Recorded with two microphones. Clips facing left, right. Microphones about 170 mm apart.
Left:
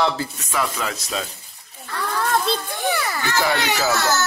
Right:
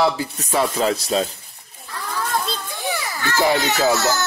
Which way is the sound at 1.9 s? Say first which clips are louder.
Left 3 dB; 65° left (ahead or behind).